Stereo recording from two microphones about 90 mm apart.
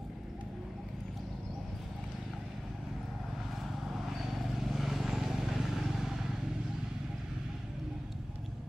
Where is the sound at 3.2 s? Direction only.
Centre (ahead or behind).